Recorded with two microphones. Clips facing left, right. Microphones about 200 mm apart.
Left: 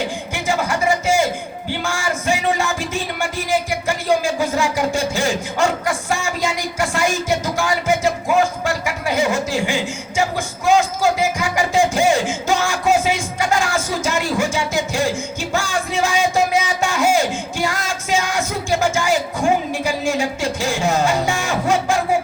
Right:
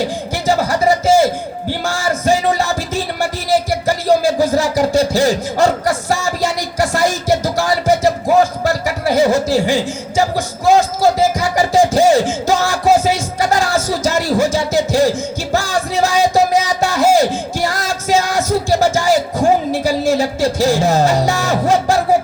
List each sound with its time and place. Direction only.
0.0 s music: 35° right (ahead or behind)